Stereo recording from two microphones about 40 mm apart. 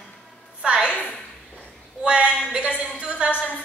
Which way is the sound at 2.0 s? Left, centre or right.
Right.